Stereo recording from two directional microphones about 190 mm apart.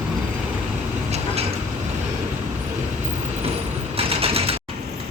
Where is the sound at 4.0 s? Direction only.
30° right (ahead or behind).